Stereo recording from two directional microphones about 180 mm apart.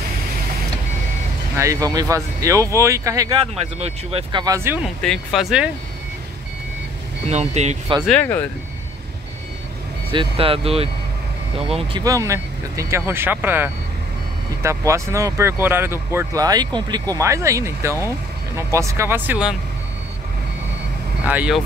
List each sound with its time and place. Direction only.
1.6 s speech: 20° right (ahead or behind)
3.8 s speech: 30° right (ahead or behind)
4.8 s speech: centre (ahead or behind)
7.2 s speech: 35° right (ahead or behind)
8.1 s speech: 10° left (ahead or behind)
10.1 s speech: 30° right (ahead or behind)
12.0 s speech: 20° right (ahead or behind)
21.2 s speech: 10° right (ahead or behind)